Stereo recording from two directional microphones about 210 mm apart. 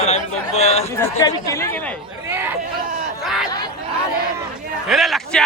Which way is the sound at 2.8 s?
40° right (ahead or behind).